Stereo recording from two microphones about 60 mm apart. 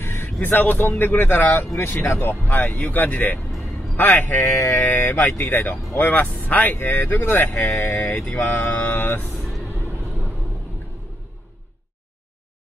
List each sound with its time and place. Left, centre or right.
0.0 s vehicle: left
0.4 s speech: left
5.7 s speech: left
7.5 s speech: left
7.9 s speech: left